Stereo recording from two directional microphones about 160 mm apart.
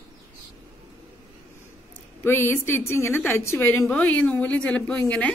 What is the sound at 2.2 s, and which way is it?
A woman's voice, 15° left (ahead or behind).